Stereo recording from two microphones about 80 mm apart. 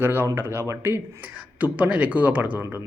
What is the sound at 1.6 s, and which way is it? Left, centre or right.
Speech, centre.